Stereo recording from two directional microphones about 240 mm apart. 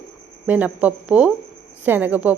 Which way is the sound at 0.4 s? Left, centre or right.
Centre.